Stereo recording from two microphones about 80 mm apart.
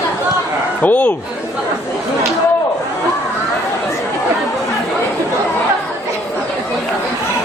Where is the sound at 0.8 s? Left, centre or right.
Left.